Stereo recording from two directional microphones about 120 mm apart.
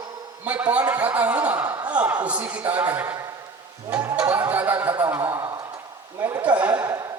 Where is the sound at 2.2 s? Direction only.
10° right (ahead or behind).